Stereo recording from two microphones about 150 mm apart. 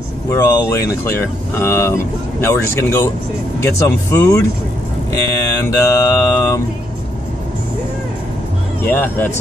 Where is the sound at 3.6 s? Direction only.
20° left (ahead or behind).